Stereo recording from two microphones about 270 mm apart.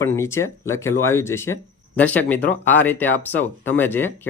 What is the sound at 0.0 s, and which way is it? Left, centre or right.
Speech, centre.